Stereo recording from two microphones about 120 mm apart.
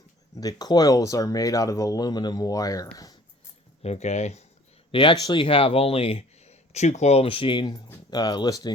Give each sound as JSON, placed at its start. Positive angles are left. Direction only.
{"t": 0.3, "sound": "speech", "side_deg": 35}
{"t": 3.8, "sound": "speech", "side_deg": 65}
{"t": 4.9, "sound": "speech", "side_deg": 45}